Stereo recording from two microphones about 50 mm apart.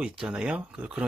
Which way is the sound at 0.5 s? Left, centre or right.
Right.